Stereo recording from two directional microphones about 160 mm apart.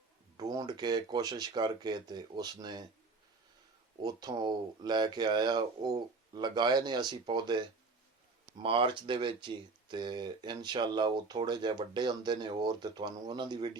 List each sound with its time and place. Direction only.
0.3 s speech: 25° right (ahead or behind)
4.0 s speech: 25° right (ahead or behind)
8.6 s speech: 35° right (ahead or behind)